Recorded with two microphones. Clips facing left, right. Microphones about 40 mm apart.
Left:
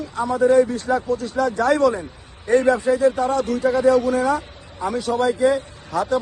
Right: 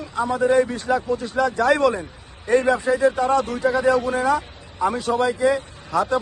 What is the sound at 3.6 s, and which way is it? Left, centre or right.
Speech, centre.